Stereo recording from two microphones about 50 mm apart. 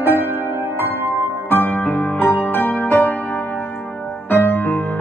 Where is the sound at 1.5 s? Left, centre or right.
Left.